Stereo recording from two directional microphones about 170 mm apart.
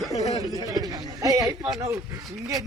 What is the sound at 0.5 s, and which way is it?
A man's voice, 20° right (ahead or behind).